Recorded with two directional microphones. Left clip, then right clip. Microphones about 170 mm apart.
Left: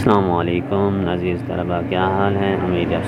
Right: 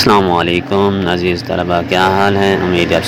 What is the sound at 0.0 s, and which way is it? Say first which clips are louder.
Speech: right 6 dB; 25° right (ahead or behind).